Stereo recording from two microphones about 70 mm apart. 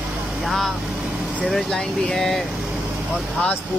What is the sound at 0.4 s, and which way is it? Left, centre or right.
Speech, centre.